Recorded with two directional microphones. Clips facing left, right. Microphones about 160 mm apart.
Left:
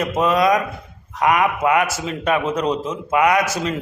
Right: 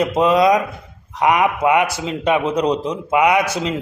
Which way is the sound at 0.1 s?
25° right (ahead or behind).